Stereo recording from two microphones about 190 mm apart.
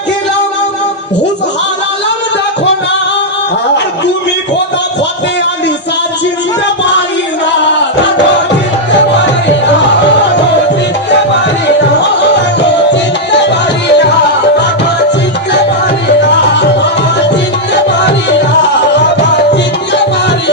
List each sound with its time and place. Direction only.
12.9 s music: 65° left (ahead or behind)